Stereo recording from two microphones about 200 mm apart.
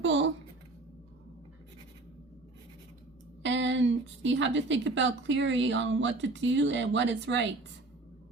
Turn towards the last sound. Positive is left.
turn(degrees=-65)  # may be behind; listen again after turning